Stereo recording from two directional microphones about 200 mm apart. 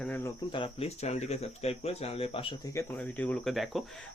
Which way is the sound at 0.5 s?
30° left (ahead or behind).